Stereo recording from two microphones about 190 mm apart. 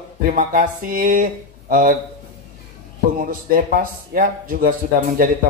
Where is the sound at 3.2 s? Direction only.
45° right (ahead or behind).